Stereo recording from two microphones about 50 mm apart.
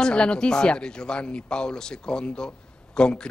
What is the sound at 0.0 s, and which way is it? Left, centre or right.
A man's voice, centre.